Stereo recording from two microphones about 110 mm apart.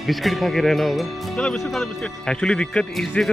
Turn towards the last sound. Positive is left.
turn(degrees=5)  # may be behind; listen again after turning